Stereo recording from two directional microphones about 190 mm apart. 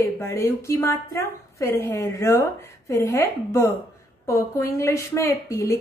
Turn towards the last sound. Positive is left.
turn(degrees=15)  # may be behind; listen again after turning